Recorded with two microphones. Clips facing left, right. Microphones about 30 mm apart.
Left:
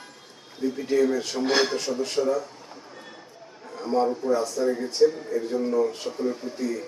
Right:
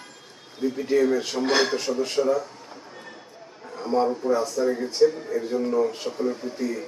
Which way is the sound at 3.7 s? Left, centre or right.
Centre.